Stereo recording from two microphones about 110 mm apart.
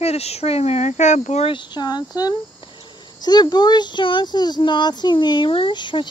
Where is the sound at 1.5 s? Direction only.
40° left (ahead or behind).